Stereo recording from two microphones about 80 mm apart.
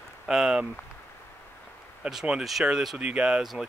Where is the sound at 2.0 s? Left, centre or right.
Centre.